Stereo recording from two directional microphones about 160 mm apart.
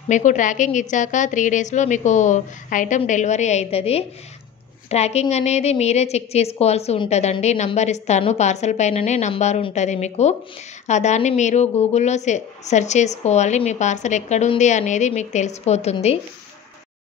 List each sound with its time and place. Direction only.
0.1 s a woman's voice: 50° left (ahead or behind)